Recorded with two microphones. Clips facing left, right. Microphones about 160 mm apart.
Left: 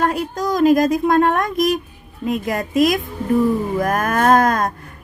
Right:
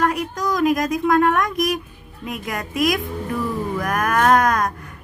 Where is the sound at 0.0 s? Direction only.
30° left (ahead or behind).